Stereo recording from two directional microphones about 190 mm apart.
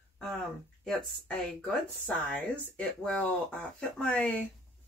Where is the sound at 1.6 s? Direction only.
5° left (ahead or behind).